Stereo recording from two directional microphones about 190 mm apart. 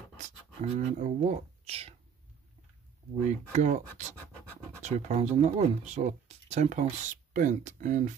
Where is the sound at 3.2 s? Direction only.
40° right (ahead or behind).